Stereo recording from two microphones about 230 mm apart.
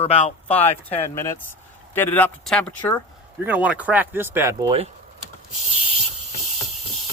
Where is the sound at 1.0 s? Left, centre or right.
Centre; by 4.9 s right.